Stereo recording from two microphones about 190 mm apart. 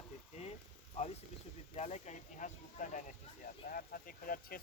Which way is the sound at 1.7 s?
35° left (ahead or behind).